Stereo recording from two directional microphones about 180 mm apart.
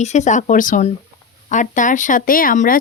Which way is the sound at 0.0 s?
40° left (ahead or behind).